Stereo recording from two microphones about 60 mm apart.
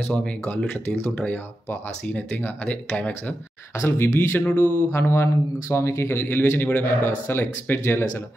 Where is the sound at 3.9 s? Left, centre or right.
Left.